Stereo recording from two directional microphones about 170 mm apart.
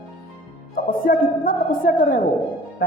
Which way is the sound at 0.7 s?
55° left (ahead or behind).